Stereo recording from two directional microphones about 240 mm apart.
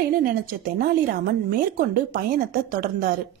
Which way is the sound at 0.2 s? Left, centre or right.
Right.